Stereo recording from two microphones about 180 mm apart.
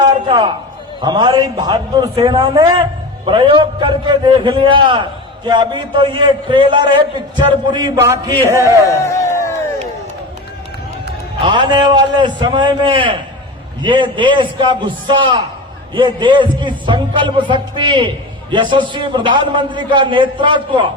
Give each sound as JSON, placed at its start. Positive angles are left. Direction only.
{"t": 0.3, "sound": "a man's voice", "side_deg": -25}
{"t": 8.9, "sound": "a sound", "side_deg": 15}
{"t": 11.3, "sound": "a man's voice", "side_deg": -25}